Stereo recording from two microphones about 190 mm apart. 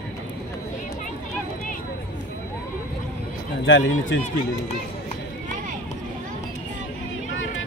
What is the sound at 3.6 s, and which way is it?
Speech, 80° left.